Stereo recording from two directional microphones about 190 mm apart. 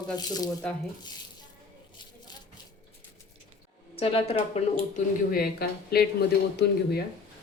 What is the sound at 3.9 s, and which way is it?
Speech, 30° left (ahead or behind).